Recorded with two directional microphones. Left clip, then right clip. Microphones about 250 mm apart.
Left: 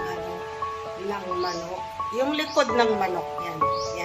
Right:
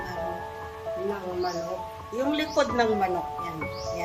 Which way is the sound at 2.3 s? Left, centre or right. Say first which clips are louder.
Even; centre.